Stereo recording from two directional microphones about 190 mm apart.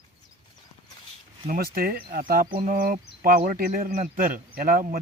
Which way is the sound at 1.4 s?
50° right (ahead or behind).